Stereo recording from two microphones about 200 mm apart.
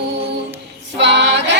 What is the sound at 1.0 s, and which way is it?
Music, 60° right (ahead or behind).